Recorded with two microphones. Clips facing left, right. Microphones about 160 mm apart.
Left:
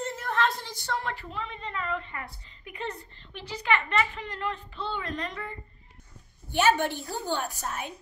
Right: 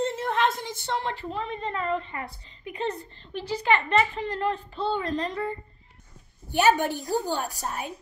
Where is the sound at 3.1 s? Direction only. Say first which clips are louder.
Right 8 dB; 35° right (ahead or behind).